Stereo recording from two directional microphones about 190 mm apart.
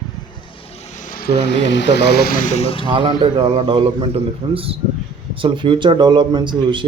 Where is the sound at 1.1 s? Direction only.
60° left (ahead or behind); by 2.9 s 30° left (ahead or behind).